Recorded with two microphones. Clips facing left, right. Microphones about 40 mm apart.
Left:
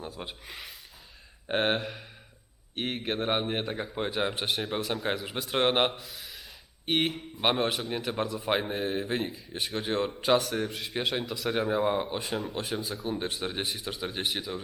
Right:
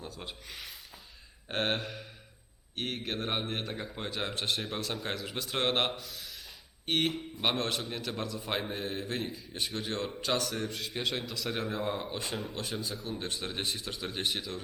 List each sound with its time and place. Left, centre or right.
0.0 s speech: centre
12.2 s speech: centre
13.1 s speech: centre